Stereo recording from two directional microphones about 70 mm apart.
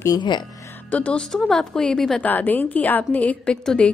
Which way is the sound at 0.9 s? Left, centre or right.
Centre.